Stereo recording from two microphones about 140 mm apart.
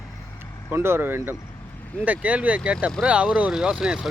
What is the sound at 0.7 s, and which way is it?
Speech, 15° right (ahead or behind).